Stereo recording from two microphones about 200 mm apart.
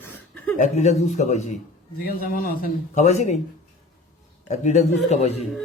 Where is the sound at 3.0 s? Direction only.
35° left (ahead or behind).